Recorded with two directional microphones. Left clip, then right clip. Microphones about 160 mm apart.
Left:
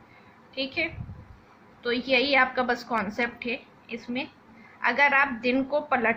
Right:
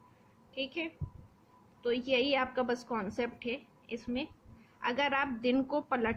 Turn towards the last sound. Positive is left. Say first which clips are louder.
# left 8 dB
turn(degrees=-40)  # may be behind; listen again after turning